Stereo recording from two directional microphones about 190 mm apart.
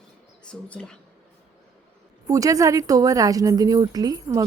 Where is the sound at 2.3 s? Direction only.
15° right (ahead or behind).